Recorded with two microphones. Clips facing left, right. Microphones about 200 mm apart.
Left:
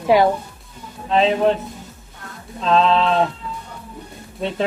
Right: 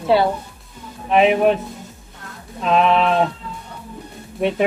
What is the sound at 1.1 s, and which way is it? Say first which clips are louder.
Speech: right 2 dB; 15° right (ahead or behind).